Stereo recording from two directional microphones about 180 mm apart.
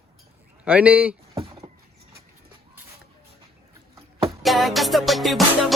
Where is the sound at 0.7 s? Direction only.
10° right (ahead or behind).